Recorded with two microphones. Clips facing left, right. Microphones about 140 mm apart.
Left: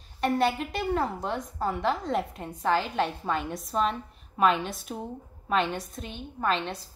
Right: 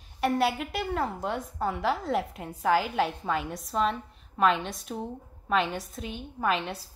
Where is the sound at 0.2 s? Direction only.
5° right (ahead or behind).